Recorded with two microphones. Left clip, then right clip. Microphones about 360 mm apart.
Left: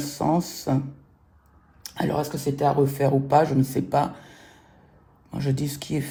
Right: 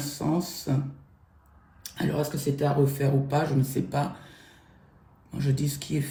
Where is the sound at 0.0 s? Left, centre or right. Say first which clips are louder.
Left 5 dB; left.